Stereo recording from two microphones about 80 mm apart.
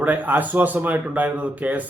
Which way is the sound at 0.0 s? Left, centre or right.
Right.